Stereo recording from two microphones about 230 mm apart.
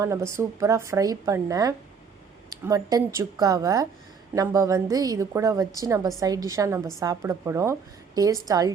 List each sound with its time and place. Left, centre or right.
0.0 s a woman's voice: centre